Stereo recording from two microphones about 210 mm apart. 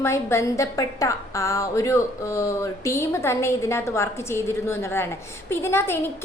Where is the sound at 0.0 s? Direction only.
15° left (ahead or behind).